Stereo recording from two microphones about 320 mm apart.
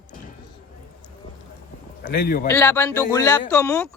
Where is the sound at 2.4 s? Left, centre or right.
Centre.